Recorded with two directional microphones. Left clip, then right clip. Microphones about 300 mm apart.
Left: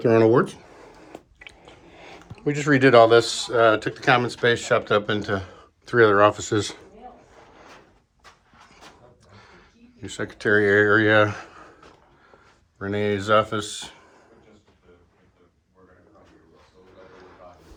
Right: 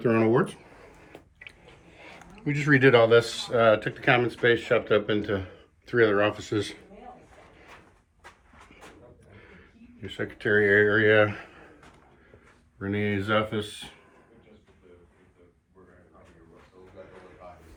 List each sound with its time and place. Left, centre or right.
1.1 s chewing: left
4.4 s speech: centre
9.3 s a sound: left
10.1 s speech: centre
12.8 s speech: centre